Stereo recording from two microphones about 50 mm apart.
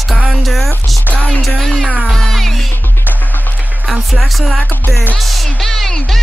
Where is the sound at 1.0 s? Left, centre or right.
Left.